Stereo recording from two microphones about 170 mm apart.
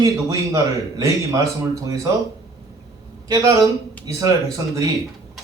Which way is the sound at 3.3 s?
20° right (ahead or behind).